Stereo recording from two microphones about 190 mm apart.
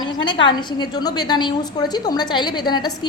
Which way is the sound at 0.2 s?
25° left (ahead or behind).